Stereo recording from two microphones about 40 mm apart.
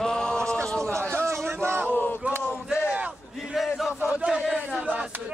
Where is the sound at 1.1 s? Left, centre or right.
Right.